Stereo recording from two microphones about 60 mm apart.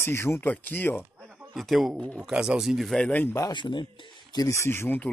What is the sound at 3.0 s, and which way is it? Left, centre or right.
Speech, left.